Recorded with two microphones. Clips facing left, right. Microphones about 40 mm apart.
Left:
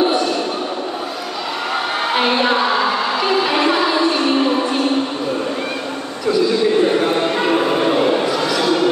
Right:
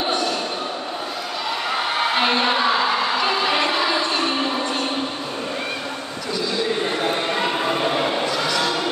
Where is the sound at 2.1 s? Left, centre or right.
Centre.